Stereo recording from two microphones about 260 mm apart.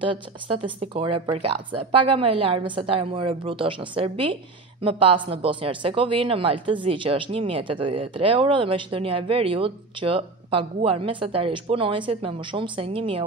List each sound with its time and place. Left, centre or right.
0.0 s speech: centre